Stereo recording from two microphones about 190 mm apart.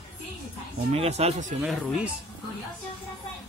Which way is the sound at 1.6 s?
5° right (ahead or behind).